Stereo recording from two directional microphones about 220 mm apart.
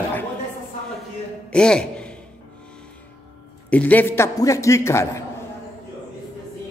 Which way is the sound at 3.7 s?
5° left (ahead or behind).